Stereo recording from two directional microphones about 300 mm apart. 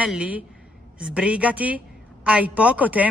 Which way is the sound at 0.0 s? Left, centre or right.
Centre.